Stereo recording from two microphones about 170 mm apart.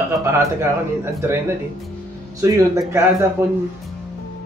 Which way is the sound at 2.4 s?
20° right (ahead or behind).